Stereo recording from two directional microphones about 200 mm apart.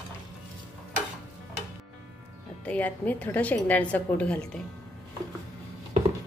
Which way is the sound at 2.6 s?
5° left (ahead or behind).